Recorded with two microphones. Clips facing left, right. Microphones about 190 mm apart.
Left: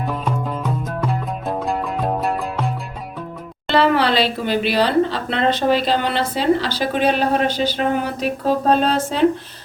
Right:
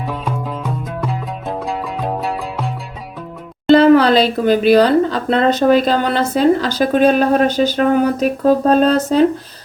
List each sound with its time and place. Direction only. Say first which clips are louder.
0.0 s music: even; centre (ahead or behind)
3.7 s speech: right 8 dB; 45° right (ahead or behind)